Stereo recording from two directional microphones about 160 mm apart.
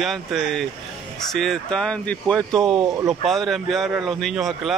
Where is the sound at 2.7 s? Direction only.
20° right (ahead or behind).